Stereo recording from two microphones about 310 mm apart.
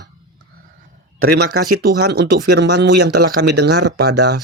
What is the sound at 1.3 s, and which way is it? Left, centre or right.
Speech, right.